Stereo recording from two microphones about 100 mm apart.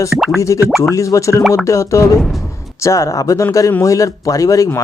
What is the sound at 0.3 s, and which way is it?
A man's voice, 30° left (ahead or behind).